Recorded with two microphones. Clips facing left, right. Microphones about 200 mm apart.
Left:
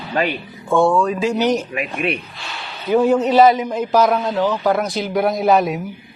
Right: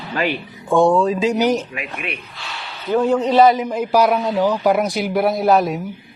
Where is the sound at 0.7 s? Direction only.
15° right (ahead or behind).